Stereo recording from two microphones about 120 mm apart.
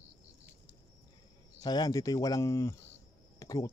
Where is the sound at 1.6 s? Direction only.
35° left (ahead or behind).